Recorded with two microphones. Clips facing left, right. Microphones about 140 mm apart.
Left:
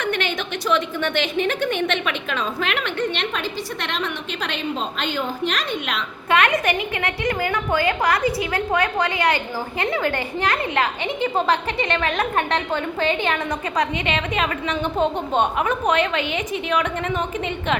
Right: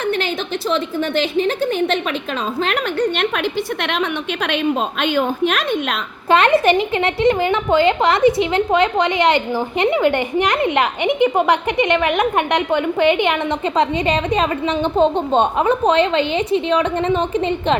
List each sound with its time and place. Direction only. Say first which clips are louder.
0.7 s a woman's voice: right 1 dB; 35° right (ahead or behind)
4.4 s a woman's voice: right 7 dB; 60° right (ahead or behind)
6.3 s a woman's voice: right 6 dB; 30° right (ahead or behind)
14.1 s a woman's voice: right 6 dB; 35° right (ahead or behind)